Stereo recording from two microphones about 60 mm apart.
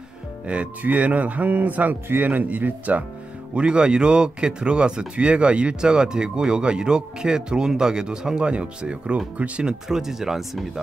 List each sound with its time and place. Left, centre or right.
0.5 s a man's voice: right
3.5 s speech: centre